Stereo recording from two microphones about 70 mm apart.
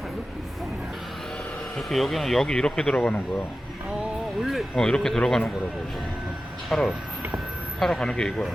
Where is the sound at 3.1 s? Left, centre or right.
Left.